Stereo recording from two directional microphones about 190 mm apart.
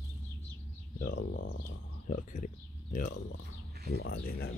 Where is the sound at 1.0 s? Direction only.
60° left (ahead or behind).